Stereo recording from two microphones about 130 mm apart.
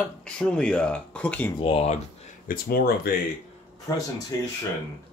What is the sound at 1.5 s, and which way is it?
Speech, 40° left (ahead or behind).